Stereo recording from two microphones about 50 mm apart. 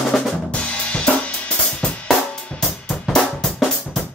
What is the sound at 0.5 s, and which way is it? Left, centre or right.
Drum kit, left.